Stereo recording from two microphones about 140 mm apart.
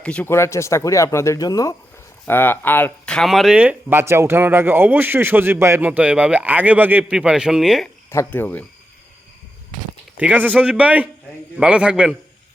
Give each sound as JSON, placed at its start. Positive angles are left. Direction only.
{"t": 0.0, "sound": "speech", "side_deg": 10}
{"t": 2.2, "sound": "speech", "side_deg": 15}
{"t": 8.1, "sound": "speech", "side_deg": 15}
{"t": 10.2, "sound": "speech", "side_deg": -10}